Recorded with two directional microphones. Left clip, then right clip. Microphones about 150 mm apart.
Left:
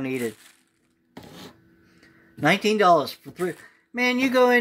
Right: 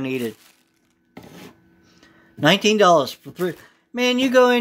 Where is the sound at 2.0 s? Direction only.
20° right (ahead or behind).